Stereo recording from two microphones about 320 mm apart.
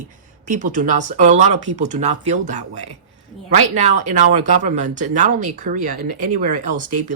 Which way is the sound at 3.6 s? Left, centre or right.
Right.